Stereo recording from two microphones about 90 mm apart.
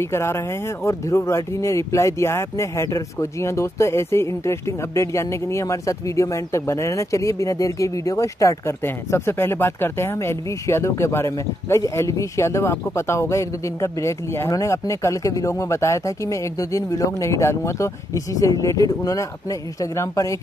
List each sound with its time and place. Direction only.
0.0 s speech: 30° left (ahead or behind)